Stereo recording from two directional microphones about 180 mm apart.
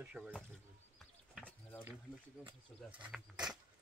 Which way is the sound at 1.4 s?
10° left (ahead or behind).